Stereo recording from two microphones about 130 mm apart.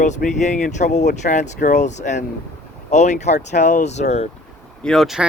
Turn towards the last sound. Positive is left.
turn(degrees=0)  # may be behind; listen again after turning